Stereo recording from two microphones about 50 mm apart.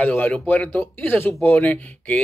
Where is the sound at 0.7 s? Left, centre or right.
Left.